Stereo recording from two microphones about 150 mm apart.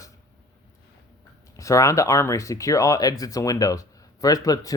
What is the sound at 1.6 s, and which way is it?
Speech, 20° left (ahead or behind).